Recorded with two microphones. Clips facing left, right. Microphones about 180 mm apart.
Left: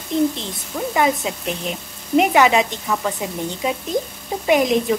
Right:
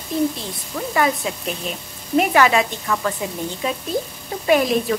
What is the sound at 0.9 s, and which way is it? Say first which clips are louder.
A woman's voice: left 1 dB; 20° left (ahead or behind).